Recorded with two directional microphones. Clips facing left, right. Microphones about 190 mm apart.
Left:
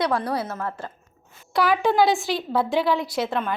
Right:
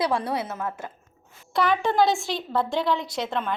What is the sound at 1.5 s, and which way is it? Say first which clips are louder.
A woman's voice: left 2 dB; 5° left (ahead or behind).